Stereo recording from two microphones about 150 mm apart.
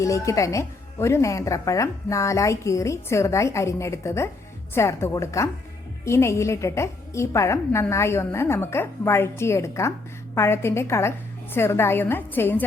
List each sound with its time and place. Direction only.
0.0 s a woman's voice: 20° left (ahead or behind)